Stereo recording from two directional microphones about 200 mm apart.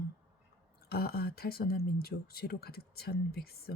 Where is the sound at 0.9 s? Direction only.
50° left (ahead or behind).